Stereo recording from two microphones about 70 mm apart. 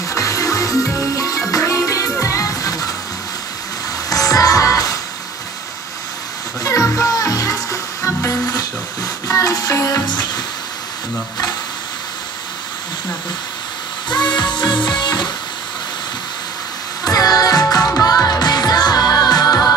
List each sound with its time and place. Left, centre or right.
0.1 s music: left
4.1 s music: left
6.6 s music: left
10.0 s music: left
14.1 s music: left
17.0 s music: left